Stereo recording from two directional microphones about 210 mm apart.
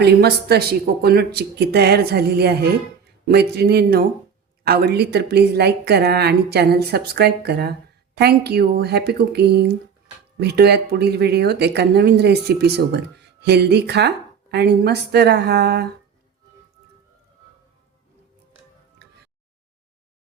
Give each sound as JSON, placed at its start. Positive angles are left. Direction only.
{"t": 0.0, "sound": "speech", "side_deg": -50}
{"t": 18.9, "sound": "music", "side_deg": -50}